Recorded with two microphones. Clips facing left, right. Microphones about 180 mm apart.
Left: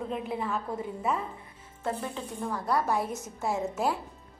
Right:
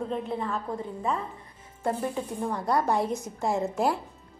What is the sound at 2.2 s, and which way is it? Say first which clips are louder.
Speech: right 4 dB; 20° right (ahead or behind).